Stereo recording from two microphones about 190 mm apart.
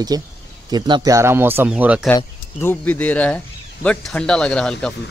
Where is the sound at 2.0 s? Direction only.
10° left (ahead or behind).